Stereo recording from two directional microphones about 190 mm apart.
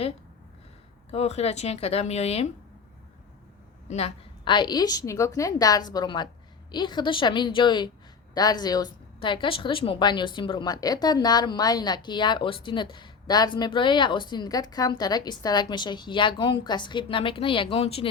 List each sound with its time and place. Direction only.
1.1 s speech: 35° left (ahead or behind)
3.8 s a woman's voice: 35° left (ahead or behind)